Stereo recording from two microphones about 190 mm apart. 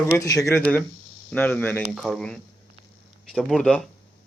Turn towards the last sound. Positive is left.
turn(degrees=5)  # may be behind; listen again after turning